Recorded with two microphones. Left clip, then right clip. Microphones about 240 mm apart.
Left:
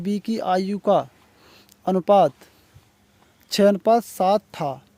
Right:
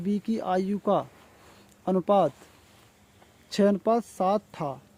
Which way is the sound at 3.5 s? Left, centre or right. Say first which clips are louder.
Left 7 dB; left.